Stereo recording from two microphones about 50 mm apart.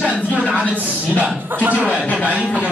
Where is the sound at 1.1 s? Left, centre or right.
Right.